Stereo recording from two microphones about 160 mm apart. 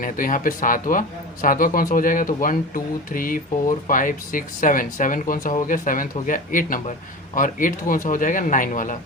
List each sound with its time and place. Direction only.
0.0 s speech: 60° left (ahead or behind)